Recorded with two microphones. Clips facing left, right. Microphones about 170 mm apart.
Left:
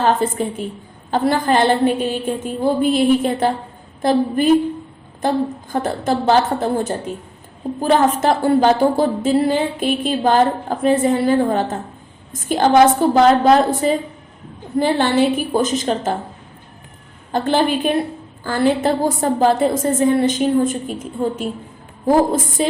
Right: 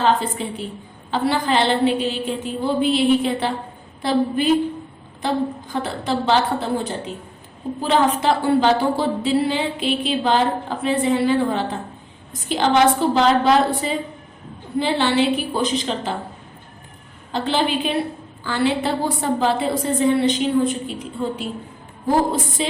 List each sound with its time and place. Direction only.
0.0 s a woman's voice: 45° left (ahead or behind)
17.3 s a woman's voice: 50° left (ahead or behind)